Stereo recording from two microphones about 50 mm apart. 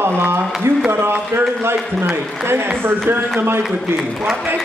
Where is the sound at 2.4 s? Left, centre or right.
Right.